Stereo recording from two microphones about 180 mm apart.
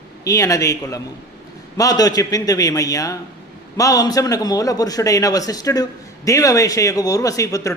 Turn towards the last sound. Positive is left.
turn(degrees=20)  # may be behind; listen again after turning